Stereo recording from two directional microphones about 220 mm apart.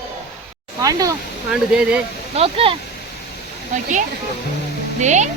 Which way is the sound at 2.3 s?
25° right (ahead or behind).